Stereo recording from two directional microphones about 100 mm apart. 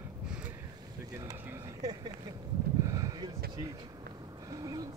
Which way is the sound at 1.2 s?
35° right (ahead or behind).